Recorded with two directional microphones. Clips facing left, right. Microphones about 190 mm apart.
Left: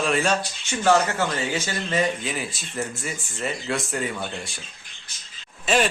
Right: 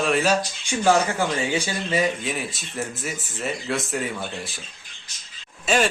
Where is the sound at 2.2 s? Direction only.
Centre (ahead or behind).